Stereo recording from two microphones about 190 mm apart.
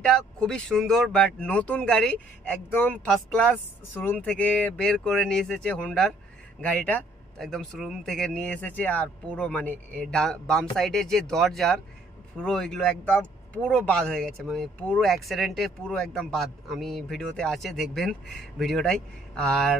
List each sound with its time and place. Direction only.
0.0 s speech: 5° left (ahead or behind)